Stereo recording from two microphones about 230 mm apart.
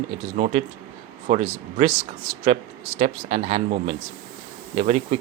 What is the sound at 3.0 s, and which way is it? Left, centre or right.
Speech, right.